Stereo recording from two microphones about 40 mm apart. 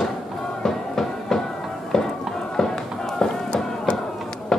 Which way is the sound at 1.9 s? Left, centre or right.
Centre.